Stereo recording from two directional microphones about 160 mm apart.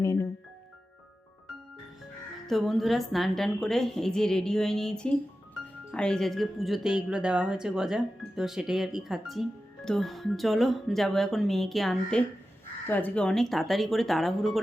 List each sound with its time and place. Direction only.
0.0 s music: 20° left (ahead or behind)
2.5 s speech: centre (ahead or behind)